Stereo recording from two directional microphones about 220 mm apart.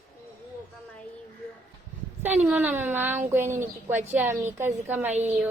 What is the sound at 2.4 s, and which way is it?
Speech, 10° right (ahead or behind).